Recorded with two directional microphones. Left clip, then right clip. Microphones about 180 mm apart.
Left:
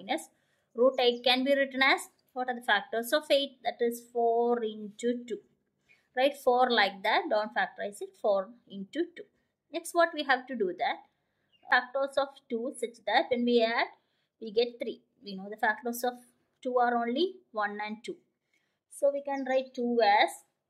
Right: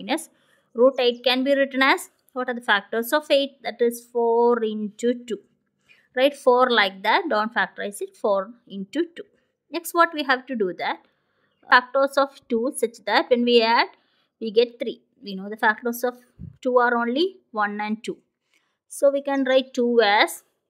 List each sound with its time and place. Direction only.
0.0 s a sound: 35° right (ahead or behind)
1.2 s speech: 25° right (ahead or behind)
18.9 s speech: 45° right (ahead or behind)